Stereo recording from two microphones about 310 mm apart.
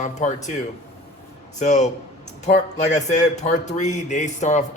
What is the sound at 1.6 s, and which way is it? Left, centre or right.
Speech, left.